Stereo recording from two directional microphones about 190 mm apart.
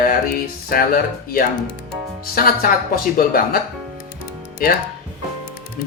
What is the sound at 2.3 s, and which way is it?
Speech, 50° left (ahead or behind).